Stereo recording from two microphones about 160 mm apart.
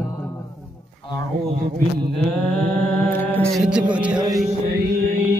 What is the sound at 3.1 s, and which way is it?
Music, 10° left (ahead or behind).